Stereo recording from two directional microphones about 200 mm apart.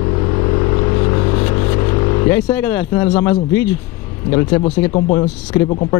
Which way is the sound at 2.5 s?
10° left (ahead or behind).